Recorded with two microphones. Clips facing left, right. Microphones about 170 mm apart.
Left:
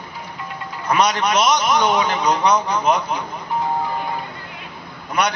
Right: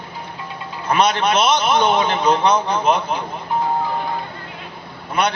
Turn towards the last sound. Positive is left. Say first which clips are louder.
# right 1 dB
turn(degrees=-25)  # may be behind; listen again after turning